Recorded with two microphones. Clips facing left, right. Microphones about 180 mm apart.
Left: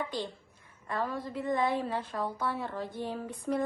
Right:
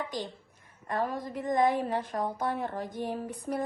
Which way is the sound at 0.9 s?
45° right (ahead or behind).